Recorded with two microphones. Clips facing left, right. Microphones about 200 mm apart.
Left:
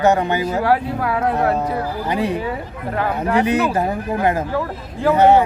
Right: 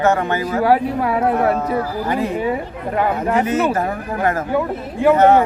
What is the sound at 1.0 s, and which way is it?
Speech, 25° right (ahead or behind).